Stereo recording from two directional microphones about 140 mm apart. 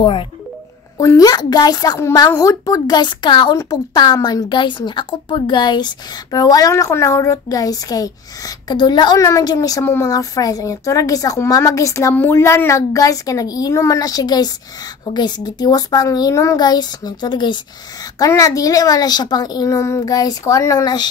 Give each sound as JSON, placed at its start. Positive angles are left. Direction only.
{"t": 0.0, "sound": "speech", "side_deg": 40}
{"t": 0.9, "sound": "a woman's voice", "side_deg": 25}